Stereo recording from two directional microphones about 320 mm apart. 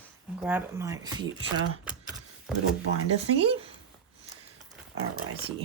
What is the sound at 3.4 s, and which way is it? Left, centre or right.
Speech, centre.